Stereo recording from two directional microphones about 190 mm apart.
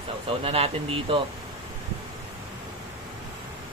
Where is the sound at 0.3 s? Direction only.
30° right (ahead or behind).